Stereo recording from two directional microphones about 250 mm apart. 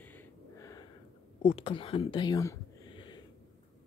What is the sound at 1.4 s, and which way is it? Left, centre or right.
Speech, left.